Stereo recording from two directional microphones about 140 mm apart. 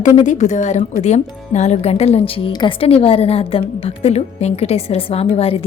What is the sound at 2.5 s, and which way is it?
A woman's voice, 35° left (ahead or behind).